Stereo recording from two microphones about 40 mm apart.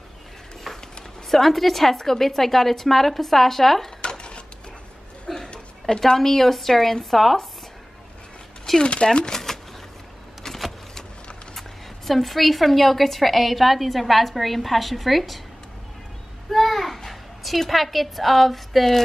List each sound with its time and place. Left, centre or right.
0.7 s a sound: centre
1.3 s a woman's voice: centre
4.0 s cash register: left
5.2 s a woman's voice: left; by 7.4 s centre
8.8 s speech: left
10.4 s power windows: centre
12.1 s a woman's voice: centre
16.4 s a child's voice: centre